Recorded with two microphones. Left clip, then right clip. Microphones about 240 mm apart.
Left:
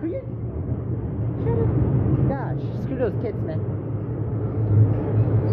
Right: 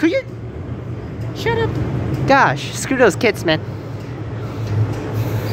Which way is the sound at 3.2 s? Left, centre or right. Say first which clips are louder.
Right 13 dB; right.